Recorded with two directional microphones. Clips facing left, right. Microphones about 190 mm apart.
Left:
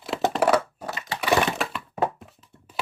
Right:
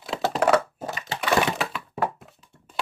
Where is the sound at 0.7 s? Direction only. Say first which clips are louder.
Right 1 dB; 25° right (ahead or behind).